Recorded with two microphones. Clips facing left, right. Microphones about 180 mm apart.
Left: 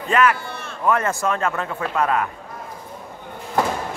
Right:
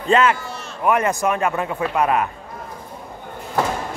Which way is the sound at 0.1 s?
25° right (ahead or behind).